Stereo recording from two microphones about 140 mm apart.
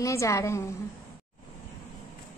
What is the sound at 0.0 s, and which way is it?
Speech, 20° left (ahead or behind).